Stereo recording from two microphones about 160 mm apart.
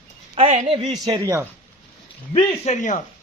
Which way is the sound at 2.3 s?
45° left (ahead or behind).